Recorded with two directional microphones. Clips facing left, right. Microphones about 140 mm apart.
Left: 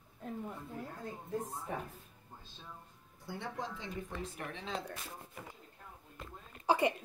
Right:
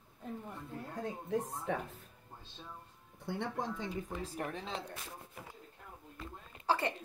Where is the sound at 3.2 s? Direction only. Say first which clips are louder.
Right 4 dB; 55° right (ahead or behind).